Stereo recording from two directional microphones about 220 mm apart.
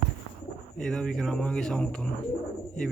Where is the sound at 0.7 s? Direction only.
Centre (ahead or behind).